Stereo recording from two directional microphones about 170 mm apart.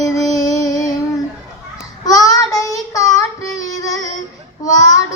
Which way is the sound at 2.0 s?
20° left (ahead or behind).